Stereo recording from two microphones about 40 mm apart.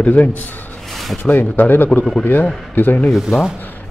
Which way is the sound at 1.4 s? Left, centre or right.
Left.